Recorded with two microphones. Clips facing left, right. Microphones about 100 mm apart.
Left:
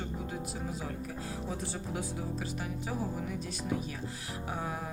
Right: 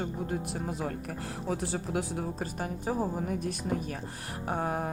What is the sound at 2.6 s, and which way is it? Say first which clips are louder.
Speech: right 9 dB; 45° right (ahead or behind).